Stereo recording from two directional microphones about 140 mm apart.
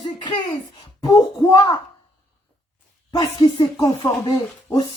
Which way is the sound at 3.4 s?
35° left (ahead or behind).